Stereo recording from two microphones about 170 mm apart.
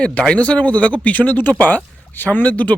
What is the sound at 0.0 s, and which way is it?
Speech, 5° left (ahead or behind).